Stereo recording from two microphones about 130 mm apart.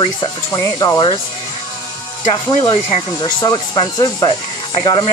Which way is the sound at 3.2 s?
35° left (ahead or behind).